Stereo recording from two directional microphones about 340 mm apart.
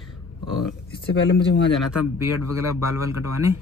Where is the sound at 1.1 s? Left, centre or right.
Left.